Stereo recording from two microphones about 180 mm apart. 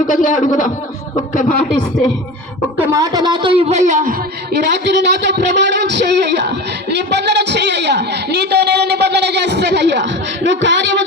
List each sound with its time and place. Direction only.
0.1 s a man's voice: 45° left (ahead or behind)
2.7 s speech: 20° right (ahead or behind); by 4.1 s 45° right (ahead or behind)
4.7 s a man's voice: 75° right (ahead or behind)